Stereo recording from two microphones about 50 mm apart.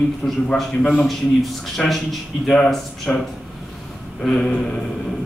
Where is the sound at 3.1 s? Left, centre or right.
Left.